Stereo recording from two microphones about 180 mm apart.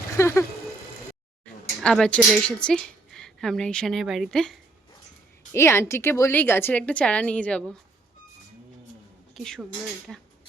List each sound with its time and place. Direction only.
0.2 s a woman's voice: 15° left (ahead or behind)
1.8 s a woman's voice: 5° left (ahead or behind)
5.5 s a woman's voice: 15° left (ahead or behind)
9.3 s a woman's voice: centre (ahead or behind)